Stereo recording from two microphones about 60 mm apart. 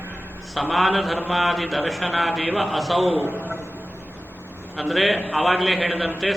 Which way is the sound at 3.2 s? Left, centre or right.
Right.